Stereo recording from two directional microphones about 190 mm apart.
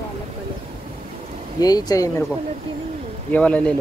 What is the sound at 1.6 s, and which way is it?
Speech, 20° left (ahead or behind).